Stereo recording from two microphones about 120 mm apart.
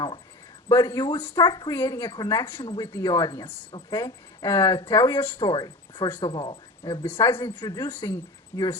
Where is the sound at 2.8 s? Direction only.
25° left (ahead or behind).